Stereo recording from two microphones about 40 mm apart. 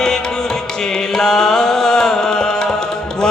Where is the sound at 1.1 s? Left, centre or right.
Centre.